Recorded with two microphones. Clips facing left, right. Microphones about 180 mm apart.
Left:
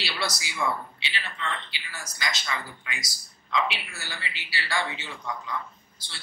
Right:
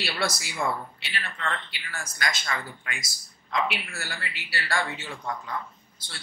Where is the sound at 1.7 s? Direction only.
55° right (ahead or behind).